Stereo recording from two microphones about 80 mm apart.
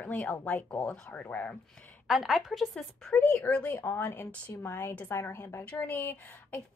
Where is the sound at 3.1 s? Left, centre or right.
Left.